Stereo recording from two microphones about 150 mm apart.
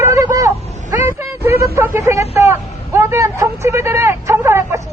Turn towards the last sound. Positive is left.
turn(degrees=-20)  # may be behind; listen again after turning